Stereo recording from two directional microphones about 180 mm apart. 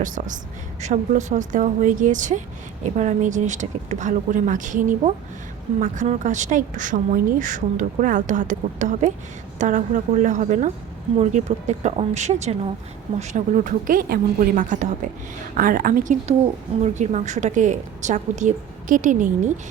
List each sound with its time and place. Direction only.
0.0 s a woman's voice: 45° right (ahead or behind)